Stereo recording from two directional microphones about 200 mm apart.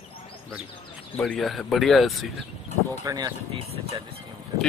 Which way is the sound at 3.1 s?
20° right (ahead or behind).